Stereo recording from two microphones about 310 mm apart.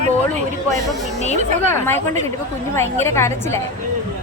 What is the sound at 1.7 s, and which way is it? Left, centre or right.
A woman's voice, centre.